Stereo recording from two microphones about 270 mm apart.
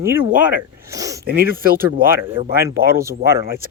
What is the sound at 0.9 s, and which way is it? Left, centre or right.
Speech, centre.